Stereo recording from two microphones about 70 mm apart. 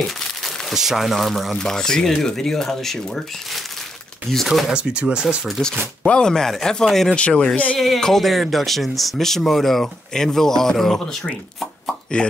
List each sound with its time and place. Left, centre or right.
0.0 s speech: centre
4.3 s speech: centre
6.0 s speech: centre
7.2 s speech: centre
7.8 s speech: centre